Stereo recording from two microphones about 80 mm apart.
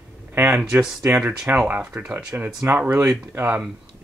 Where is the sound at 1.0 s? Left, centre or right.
Centre.